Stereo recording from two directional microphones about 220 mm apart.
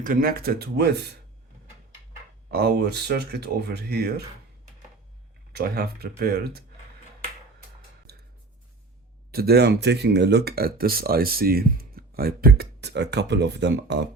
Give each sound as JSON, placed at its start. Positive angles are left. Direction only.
{"t": 0.0, "sound": "speech", "side_deg": -40}
{"t": 2.5, "sound": "speech", "side_deg": -45}
{"t": 5.5, "sound": "speech", "side_deg": -45}
{"t": 8.1, "sound": "a sound", "side_deg": -45}
{"t": 9.3, "sound": "speech", "side_deg": -45}